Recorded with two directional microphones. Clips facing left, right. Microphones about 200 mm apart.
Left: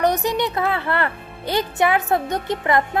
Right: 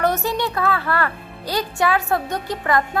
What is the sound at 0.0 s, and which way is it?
Speech, 15° left (ahead or behind).